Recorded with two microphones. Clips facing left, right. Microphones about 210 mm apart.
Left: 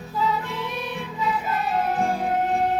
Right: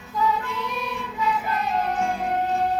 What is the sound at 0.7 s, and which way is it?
Music, centre (ahead or behind).